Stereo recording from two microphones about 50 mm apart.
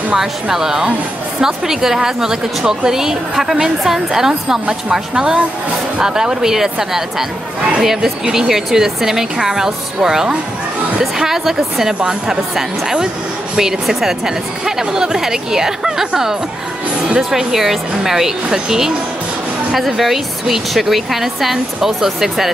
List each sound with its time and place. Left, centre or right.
0.1 s a woman's voice: centre